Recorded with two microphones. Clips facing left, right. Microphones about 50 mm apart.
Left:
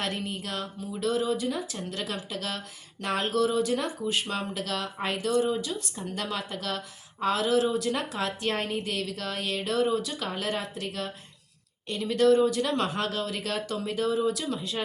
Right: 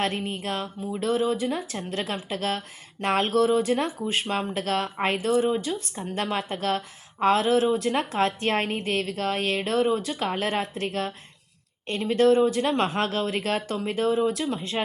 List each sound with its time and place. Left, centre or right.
0.0 s a woman's voice: right